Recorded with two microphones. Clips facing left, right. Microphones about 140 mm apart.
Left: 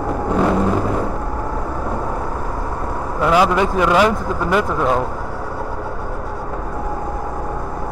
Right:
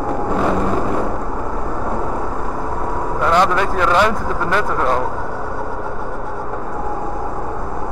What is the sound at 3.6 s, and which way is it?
Speech, 10° left (ahead or behind).